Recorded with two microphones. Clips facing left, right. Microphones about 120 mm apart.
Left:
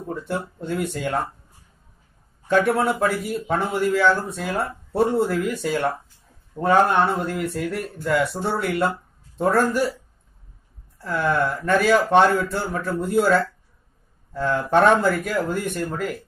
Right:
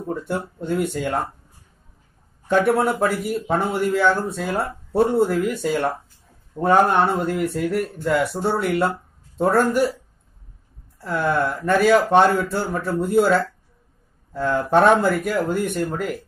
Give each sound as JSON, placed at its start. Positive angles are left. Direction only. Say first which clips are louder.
{"t": 0.7, "sound": "speech", "louder": "right 3 dB", "side_deg": -15}
{"t": 2.4, "sound": "speech", "louder": "right 1 dB", "side_deg": -15}
{"t": 11.0, "sound": "speech", "louder": "right 1 dB", "side_deg": -15}
{"t": 14.3, "sound": "speech", "louder": "right 1 dB", "side_deg": -10}